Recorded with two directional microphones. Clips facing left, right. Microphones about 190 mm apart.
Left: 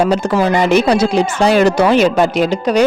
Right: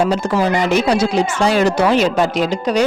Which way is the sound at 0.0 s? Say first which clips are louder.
Left 2 dB; 65° left (ahead or behind).